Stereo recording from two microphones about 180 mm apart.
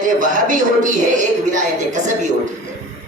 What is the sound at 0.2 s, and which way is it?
A man's voice, 45° right (ahead or behind).